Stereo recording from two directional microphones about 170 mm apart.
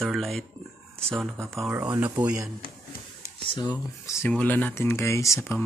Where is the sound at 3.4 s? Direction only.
30° left (ahead or behind).